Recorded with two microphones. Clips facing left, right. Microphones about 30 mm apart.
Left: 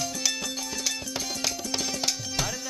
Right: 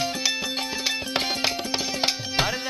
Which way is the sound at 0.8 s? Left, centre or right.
Right.